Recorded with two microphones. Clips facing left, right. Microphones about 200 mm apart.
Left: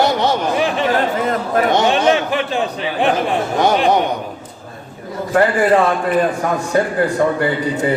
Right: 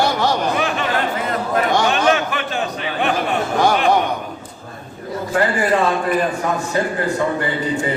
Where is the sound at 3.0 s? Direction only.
30° left (ahead or behind).